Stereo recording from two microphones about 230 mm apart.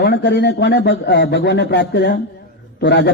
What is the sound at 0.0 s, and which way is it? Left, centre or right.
A man's voice, left.